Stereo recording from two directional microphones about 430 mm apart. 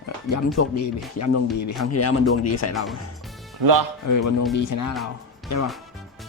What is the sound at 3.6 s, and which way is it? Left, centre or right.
Speech, right.